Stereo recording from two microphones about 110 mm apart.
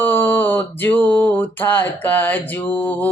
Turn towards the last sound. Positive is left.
turn(degrees=15)  # may be behind; listen again after turning